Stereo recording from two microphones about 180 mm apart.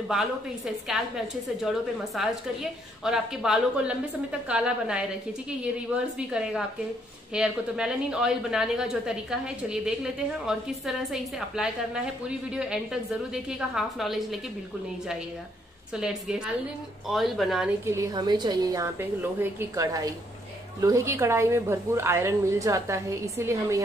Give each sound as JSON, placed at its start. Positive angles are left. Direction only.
{"t": 0.1, "sound": "a woman's voice", "side_deg": 0}
{"t": 6.1, "sound": "a woman's voice", "side_deg": -5}
{"t": 15.9, "sound": "a woman's voice", "side_deg": -5}
{"t": 17.8, "sound": "a woman's voice", "side_deg": -15}